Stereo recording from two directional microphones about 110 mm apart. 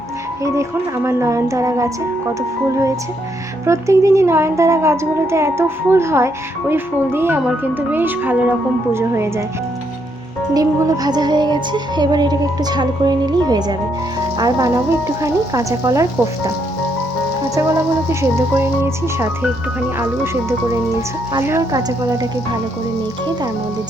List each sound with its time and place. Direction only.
0.4 s a woman's voice: 25° right (ahead or behind)
3.7 s a woman's voice: 25° right (ahead or behind)
10.5 s music: 35° right (ahead or behind)
17.5 s a woman's voice: 25° right (ahead or behind)
20.0 s a woman's voice: 25° right (ahead or behind)
21.7 s music: 35° right (ahead or behind)